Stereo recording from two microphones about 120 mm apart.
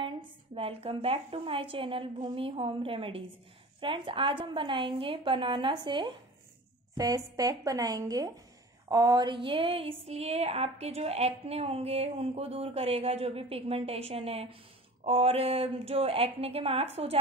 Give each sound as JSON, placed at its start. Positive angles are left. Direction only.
{"t": 0.6, "sound": "a woman's voice", "side_deg": -55}
{"t": 7.0, "sound": "a woman's voice", "side_deg": -30}
{"t": 8.8, "sound": "a sound", "side_deg": -30}